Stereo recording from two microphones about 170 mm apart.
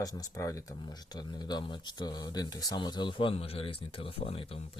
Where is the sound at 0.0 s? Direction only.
20° left (ahead or behind).